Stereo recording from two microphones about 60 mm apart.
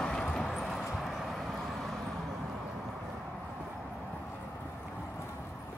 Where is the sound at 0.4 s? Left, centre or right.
Centre.